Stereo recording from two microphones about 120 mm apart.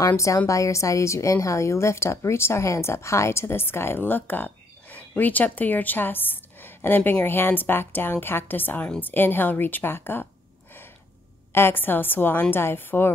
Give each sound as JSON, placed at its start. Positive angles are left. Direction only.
{"t": 0.0, "sound": "a woman's voice", "side_deg": 25}
{"t": 11.5, "sound": "a woman's voice", "side_deg": 20}